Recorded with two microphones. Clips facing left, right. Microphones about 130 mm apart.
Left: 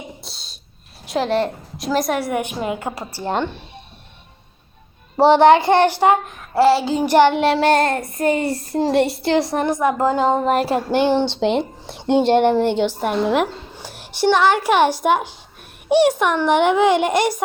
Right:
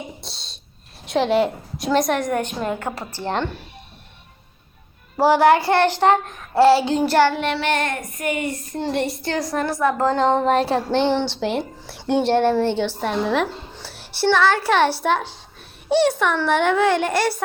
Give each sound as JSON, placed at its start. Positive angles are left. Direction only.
{"t": 0.2, "sound": "a sound", "side_deg": 0}
{"t": 1.0, "sound": "child singing", "side_deg": 0}
{"t": 5.1, "sound": "child singing", "side_deg": 25}
{"t": 7.0, "sound": "child singing", "side_deg": 15}
{"t": 7.4, "sound": "child singing", "side_deg": 40}